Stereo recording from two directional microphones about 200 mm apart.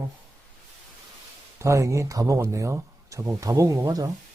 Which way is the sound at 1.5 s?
15° right (ahead or behind).